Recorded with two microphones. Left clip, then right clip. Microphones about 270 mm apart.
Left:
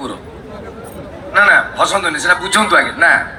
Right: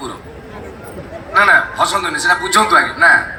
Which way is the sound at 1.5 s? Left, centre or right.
Centre.